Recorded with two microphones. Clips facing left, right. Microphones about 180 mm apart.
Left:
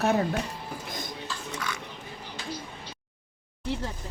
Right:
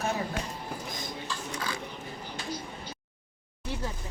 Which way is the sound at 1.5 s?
30° right (ahead or behind).